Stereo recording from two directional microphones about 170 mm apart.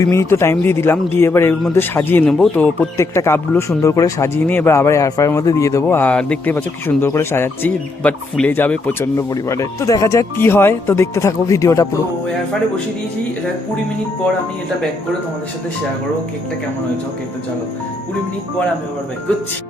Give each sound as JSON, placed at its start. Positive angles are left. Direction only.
{"t": 0.0, "sound": "speech", "side_deg": 15}